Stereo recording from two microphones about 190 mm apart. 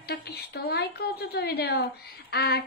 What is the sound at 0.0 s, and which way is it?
Speech, 60° left (ahead or behind).